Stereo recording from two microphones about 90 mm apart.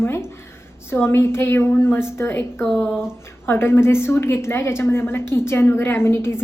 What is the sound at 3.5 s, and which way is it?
A woman's voice, 25° left (ahead or behind).